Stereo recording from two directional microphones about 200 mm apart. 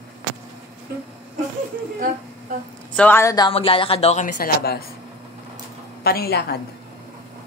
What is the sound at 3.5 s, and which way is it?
A woman's voice, 25° left (ahead or behind).